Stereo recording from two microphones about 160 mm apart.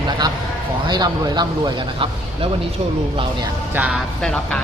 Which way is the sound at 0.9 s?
25° right (ahead or behind).